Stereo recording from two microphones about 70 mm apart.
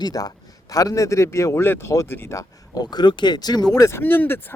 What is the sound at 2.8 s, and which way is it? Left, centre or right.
Speech, left.